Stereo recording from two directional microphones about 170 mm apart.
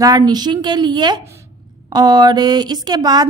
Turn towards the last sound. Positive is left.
turn(degrees=-25)  # may be behind; listen again after turning